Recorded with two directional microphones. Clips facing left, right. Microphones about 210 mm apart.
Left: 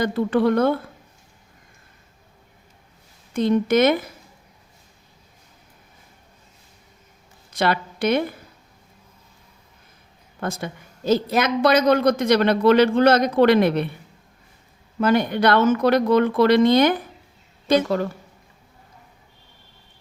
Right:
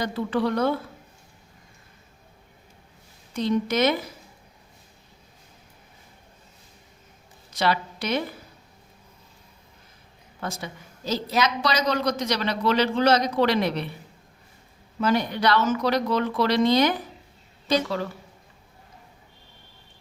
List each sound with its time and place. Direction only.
0.0 s speech: 55° left (ahead or behind)
3.3 s speech: 55° left (ahead or behind)
7.5 s a woman's voice: 55° left (ahead or behind)
10.4 s a woman's voice: 55° left (ahead or behind)
15.0 s a woman's voice: 55° left (ahead or behind)